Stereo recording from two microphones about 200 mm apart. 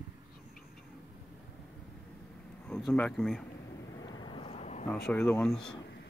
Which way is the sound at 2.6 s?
5° left (ahead or behind).